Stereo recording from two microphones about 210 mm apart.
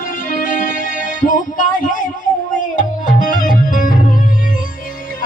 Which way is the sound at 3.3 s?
40° left (ahead or behind).